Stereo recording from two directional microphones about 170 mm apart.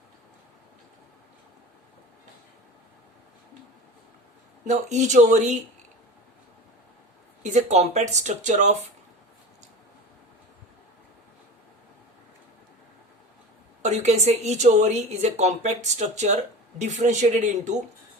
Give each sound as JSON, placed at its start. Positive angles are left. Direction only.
{"t": 4.6, "sound": "speech", "side_deg": -45}
{"t": 7.4, "sound": "speech", "side_deg": -45}
{"t": 13.8, "sound": "speech", "side_deg": -40}